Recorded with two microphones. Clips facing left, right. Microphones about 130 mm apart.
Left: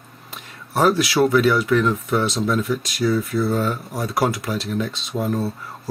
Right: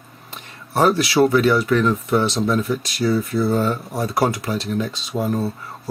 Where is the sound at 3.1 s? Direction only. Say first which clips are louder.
Right 1 dB; 25° right (ahead or behind).